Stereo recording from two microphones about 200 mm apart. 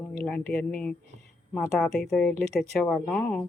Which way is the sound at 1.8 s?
Centre (ahead or behind).